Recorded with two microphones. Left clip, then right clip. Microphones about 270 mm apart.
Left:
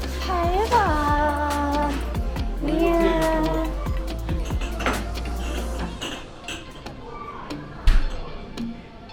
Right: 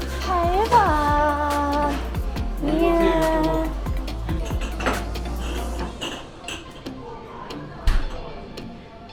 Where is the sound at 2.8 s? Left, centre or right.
Centre.